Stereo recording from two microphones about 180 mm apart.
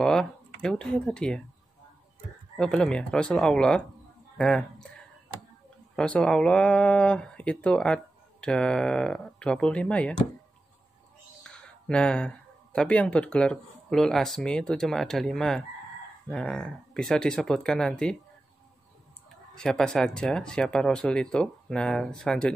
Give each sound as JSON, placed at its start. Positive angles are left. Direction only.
{"t": 0.0, "sound": "speech", "side_deg": 5}
{"t": 2.5, "sound": "speech", "side_deg": 5}
{"t": 11.4, "sound": "speech", "side_deg": 5}
{"t": 19.5, "sound": "speech", "side_deg": 5}